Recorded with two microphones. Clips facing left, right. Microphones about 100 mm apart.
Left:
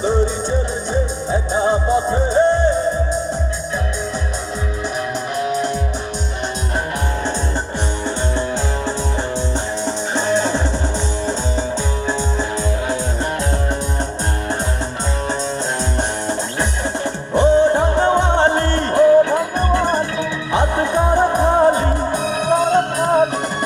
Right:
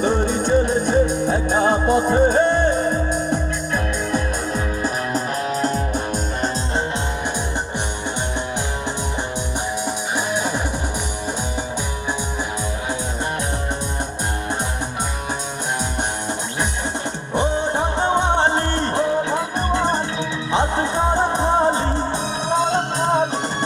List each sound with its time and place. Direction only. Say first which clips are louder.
0.9 s music: right 3 dB; 60° right (ahead or behind)
5.4 s music: left 5 dB; 40° right (ahead or behind)
9.8 s music: left 3 dB; 10° right (ahead or behind)
17.3 s music: left 8 dB; 20° right (ahead or behind)